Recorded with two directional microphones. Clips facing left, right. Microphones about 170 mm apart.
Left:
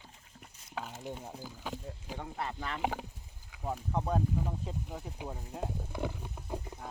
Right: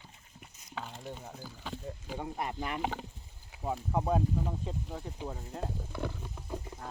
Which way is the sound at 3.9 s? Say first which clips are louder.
Right 2 dB; 5° right (ahead or behind).